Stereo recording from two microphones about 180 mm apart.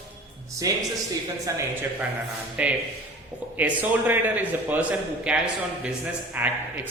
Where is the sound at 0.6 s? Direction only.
20° right (ahead or behind).